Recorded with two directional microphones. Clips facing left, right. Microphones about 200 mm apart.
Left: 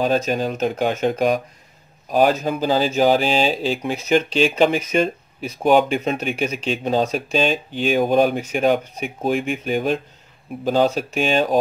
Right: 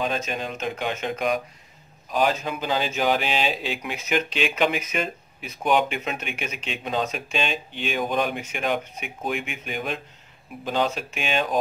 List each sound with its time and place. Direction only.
0.0 s speech: 40° left (ahead or behind)